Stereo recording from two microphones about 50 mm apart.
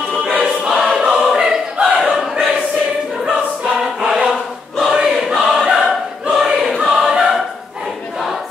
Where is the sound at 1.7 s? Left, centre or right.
Right.